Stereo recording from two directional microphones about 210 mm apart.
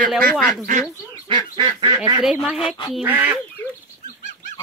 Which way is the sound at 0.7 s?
40° right (ahead or behind).